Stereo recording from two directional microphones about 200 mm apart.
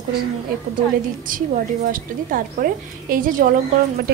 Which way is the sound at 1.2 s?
45° right (ahead or behind).